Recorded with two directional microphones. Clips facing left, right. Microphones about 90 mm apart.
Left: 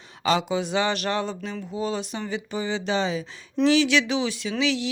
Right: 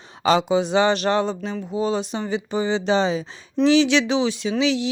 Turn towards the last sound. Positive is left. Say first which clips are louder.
# right 4 dB
turn(degrees=-20)  # may be behind; listen again after turning